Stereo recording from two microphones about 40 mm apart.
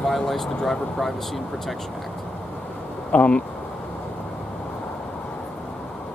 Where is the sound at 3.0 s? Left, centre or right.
Left.